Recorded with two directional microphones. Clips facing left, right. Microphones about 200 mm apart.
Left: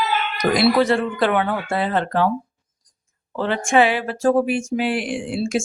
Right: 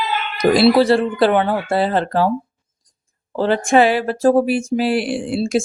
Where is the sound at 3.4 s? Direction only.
35° right (ahead or behind).